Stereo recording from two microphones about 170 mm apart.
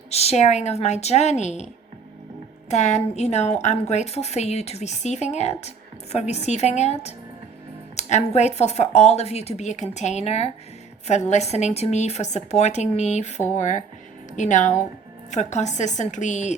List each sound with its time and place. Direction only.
0.1 s a woman's voice: 40° left (ahead or behind)